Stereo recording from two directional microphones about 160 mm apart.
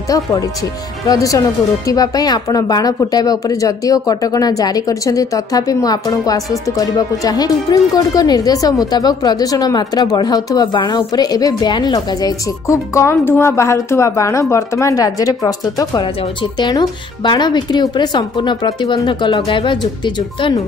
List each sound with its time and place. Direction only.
0.1 s speech: 20° left (ahead or behind)